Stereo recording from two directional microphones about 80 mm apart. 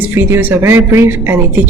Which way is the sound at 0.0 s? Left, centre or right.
Right.